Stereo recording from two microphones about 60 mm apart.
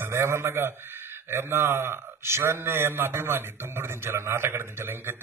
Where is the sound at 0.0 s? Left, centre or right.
Right.